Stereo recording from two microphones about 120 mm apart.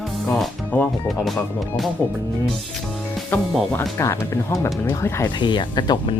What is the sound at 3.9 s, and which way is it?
Speech, 20° left (ahead or behind).